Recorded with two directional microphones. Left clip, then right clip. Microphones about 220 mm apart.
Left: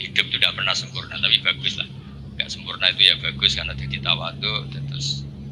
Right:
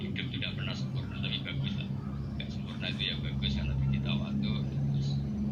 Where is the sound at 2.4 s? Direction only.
45° left (ahead or behind).